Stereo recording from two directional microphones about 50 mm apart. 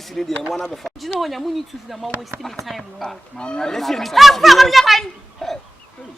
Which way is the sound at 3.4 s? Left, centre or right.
Centre.